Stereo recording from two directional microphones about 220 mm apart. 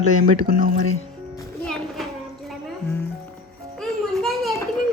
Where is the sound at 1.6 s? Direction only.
Centre (ahead or behind).